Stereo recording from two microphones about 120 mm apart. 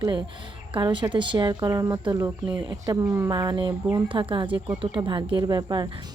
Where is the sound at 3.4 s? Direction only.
35° right (ahead or behind).